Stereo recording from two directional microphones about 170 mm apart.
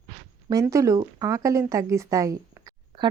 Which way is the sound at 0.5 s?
20° right (ahead or behind).